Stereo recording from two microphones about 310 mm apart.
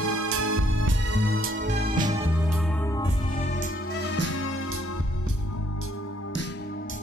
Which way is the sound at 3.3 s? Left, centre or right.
Left.